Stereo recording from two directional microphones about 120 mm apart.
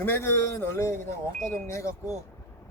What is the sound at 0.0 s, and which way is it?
A man's voice, 20° left (ahead or behind).